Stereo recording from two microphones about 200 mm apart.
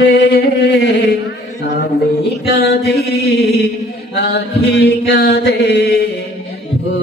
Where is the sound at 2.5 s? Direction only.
55° left (ahead or behind).